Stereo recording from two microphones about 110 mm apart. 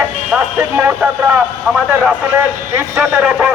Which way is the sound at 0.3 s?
15° right (ahead or behind).